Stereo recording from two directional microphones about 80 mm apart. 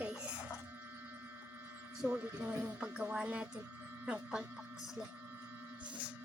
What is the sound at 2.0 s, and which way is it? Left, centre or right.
Speech, right.